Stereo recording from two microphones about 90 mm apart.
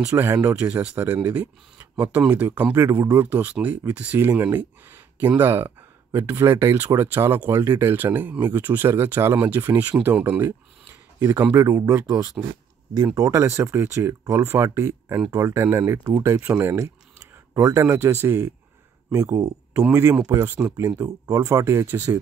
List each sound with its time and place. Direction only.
0.0 s speech: 35° right (ahead or behind)
0.6 s speech: 15° right (ahead or behind); by 3.3 s 30° right (ahead or behind)
3.3 s speech: 20° right (ahead or behind)
10.2 s speech: 25° right (ahead or behind)
11.5 s speech: 40° right (ahead or behind)
16.4 s speech: 15° right (ahead or behind)
16.7 s speech: 40° right (ahead or behind)
19.9 s speech: 25° right (ahead or behind)
21.0 s speech: 40° right (ahead or behind)